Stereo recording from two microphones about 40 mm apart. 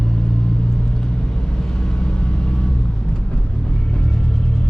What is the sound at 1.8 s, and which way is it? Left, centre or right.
Vehicle, left.